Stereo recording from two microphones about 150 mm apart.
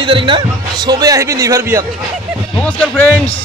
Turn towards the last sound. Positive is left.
turn(degrees=10)  # may be behind; listen again after turning